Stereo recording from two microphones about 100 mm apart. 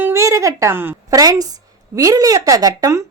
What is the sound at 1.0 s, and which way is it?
A woman's voice, 35° right (ahead or behind).